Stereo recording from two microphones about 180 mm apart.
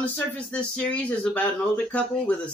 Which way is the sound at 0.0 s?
5° left (ahead or behind).